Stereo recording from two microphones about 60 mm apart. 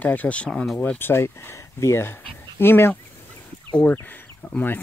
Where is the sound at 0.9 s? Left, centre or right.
Left.